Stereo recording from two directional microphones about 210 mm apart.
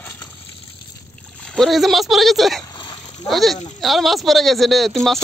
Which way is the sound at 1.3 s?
5° left (ahead or behind).